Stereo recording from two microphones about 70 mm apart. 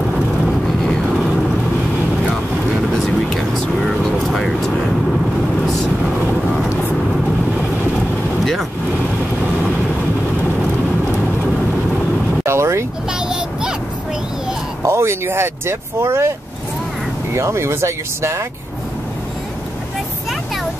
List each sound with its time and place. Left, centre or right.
3.3 s vehicle: centre
12.4 s vehicle: right
13.3 s child singing: centre
14.9 s vehicle: right
17.3 s speech: right